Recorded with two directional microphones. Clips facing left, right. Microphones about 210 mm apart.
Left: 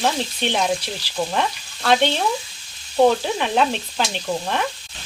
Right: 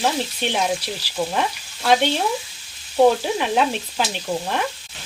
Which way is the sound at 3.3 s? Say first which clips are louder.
Even; 5° right (ahead or behind).